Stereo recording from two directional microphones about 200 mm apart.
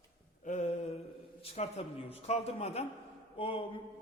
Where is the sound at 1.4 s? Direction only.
30° left (ahead or behind).